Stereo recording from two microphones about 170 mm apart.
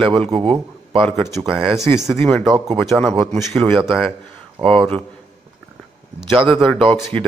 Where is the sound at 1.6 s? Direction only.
5° right (ahead or behind).